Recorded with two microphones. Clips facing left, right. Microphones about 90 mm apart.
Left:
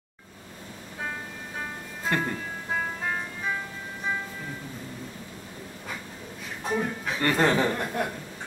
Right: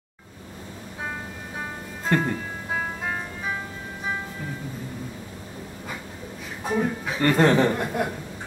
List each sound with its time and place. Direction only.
2.0 s music: 5° right (ahead or behind)
6.6 s a man's voice: 5° right (ahead or behind)